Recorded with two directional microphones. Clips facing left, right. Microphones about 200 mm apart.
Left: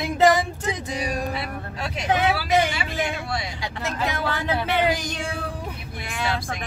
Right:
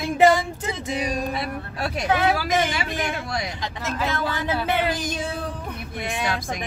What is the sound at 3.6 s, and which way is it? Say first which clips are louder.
Speech: even; 15° left (ahead or behind).